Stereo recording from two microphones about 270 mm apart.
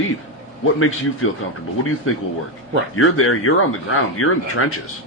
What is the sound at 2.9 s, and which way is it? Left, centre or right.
Speech, left.